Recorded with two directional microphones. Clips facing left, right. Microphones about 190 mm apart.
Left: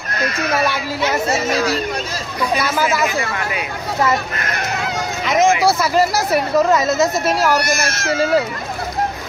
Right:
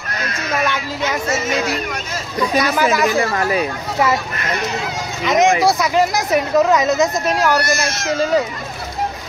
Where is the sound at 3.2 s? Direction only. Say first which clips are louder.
Right 5 dB; 35° right (ahead or behind).